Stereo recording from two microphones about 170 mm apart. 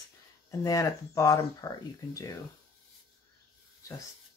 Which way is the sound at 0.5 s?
20° left (ahead or behind).